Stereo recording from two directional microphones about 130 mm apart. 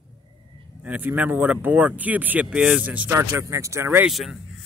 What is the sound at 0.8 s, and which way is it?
Speech, 10° right (ahead or behind).